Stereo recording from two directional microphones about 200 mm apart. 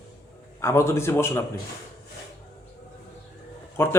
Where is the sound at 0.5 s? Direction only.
15° left (ahead or behind).